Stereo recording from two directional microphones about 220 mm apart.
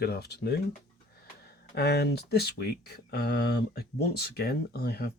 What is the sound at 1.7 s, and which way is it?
Speech, 50° left (ahead or behind).